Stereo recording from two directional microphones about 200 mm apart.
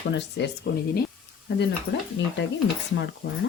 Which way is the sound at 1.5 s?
55° left (ahead or behind).